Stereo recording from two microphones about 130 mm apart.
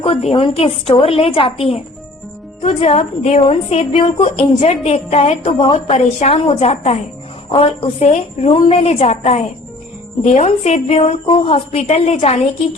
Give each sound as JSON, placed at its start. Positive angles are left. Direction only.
{"t": 0.0, "sound": "a woman's voice", "side_deg": 50}